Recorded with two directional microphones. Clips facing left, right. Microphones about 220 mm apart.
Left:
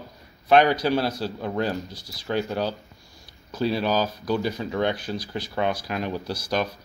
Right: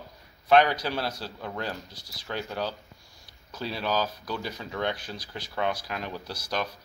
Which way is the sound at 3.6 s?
10° left (ahead or behind).